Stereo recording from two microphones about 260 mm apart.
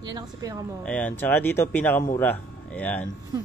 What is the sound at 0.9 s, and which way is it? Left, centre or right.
Speech, centre.